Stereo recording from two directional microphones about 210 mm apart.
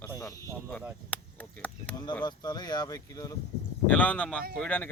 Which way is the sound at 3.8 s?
5° left (ahead or behind).